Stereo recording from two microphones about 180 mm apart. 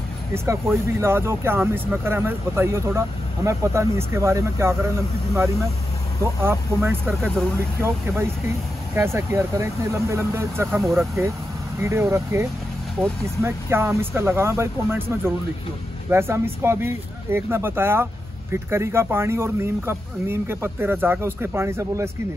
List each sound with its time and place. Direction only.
0.3 s speech: 15° right (ahead or behind)
6.4 s speech: 15° right (ahead or behind)
7.1 s speech: centre (ahead or behind)
7.5 s speech: 15° right (ahead or behind)